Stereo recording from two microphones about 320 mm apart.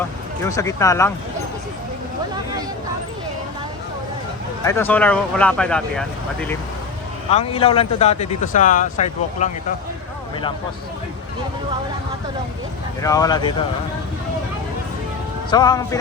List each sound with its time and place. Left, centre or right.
0.4 s speech: centre
4.6 s speech: centre
7.3 s speech: centre
13.0 s speech: centre
15.4 s speech: centre